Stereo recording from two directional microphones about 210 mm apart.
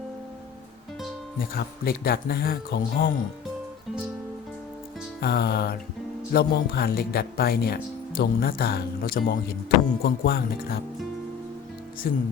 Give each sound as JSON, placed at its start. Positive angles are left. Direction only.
{"t": 1.4, "sound": "speech", "side_deg": 45}
{"t": 5.2, "sound": "speech", "side_deg": 50}
{"t": 12.0, "sound": "speech", "side_deg": 45}